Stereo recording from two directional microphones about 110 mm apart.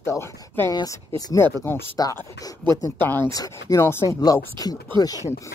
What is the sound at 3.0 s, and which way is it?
Speech, 20° left (ahead or behind).